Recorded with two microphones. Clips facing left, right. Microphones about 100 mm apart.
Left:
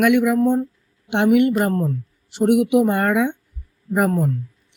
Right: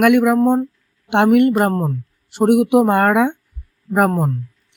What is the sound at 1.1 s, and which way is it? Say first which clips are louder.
Speech: right 3 dB; 55° right (ahead or behind).